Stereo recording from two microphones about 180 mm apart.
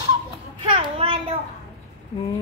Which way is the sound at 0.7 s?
30° right (ahead or behind).